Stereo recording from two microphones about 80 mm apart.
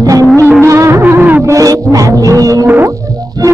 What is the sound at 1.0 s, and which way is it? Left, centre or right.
Music, right.